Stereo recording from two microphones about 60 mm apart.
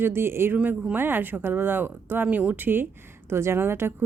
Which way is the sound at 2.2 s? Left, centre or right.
Right.